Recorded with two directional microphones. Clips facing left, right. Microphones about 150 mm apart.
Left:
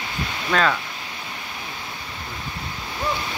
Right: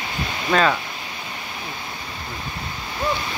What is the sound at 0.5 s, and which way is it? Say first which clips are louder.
Speech: right 2 dB; 15° right (ahead or behind).